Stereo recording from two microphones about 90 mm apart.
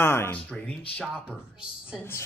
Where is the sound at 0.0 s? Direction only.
30° left (ahead or behind).